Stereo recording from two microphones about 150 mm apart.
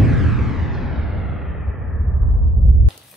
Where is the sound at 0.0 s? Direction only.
Centre (ahead or behind).